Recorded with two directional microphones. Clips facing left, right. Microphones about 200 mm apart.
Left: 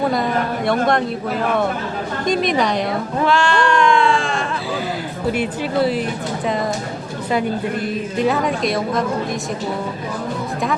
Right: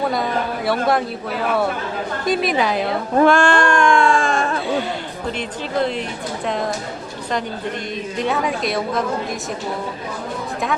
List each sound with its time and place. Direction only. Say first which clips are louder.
0.0 s a woman's voice: left 2 dB; centre (ahead or behind)
2.2 s a woman's voice: left 1 dB; 5° right (ahead or behind)
3.2 s speech: even; 50° right (ahead or behind)
5.4 s a woman's voice: left 2 dB; 5° left (ahead or behind)
8.2 s a woman's voice: left 3 dB; centre (ahead or behind)